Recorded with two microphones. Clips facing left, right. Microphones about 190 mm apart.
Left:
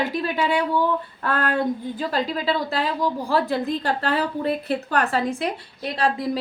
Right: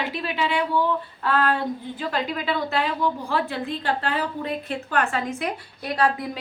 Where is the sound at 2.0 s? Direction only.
35° left (ahead or behind).